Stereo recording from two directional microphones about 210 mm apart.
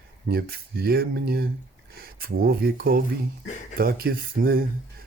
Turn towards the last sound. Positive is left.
turn(degrees=-45)  # may be behind; listen again after turning